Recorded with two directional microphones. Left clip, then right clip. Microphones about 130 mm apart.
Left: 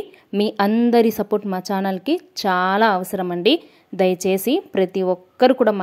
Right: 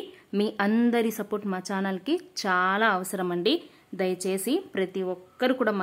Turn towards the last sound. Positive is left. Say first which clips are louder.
# left 10 dB
turn(degrees=35)  # may be behind; listen again after turning